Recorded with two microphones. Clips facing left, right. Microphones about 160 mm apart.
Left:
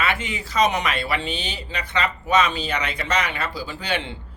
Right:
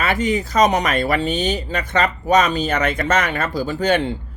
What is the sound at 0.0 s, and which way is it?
Speech, 40° right (ahead or behind).